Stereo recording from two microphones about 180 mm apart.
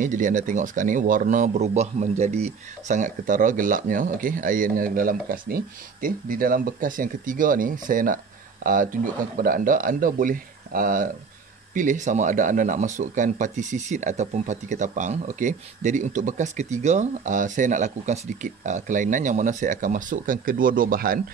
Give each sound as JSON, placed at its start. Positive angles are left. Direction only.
{"t": 0.0, "sound": "speech", "side_deg": -45}